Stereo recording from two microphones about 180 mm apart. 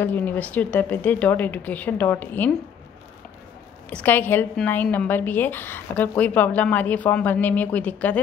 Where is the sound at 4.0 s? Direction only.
10° left (ahead or behind).